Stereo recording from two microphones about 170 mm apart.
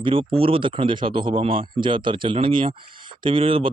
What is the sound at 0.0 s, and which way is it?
Speech, 30° right (ahead or behind).